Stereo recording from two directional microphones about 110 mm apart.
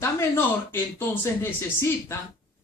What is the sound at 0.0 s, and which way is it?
Speech, 20° left (ahead or behind).